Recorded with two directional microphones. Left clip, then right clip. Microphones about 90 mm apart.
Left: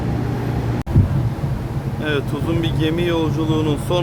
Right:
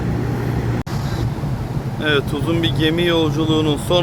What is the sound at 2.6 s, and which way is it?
Speech, 20° right (ahead or behind).